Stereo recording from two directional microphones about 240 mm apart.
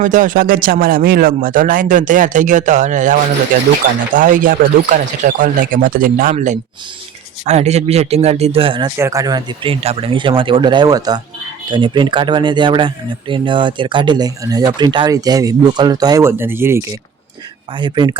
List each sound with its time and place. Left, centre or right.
0.0 s speech: right